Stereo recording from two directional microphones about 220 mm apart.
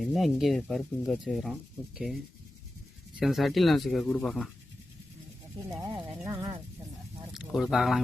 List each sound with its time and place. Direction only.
0.0 s speech: centre (ahead or behind)
3.2 s speech: centre (ahead or behind)
5.7 s speech: 20° right (ahead or behind)
7.3 s speech: centre (ahead or behind)